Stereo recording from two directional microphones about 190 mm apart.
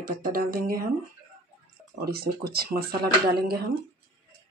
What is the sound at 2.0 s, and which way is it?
Speech, 55° right (ahead or behind).